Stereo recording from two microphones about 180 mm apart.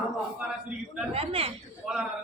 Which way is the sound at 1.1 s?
30° right (ahead or behind).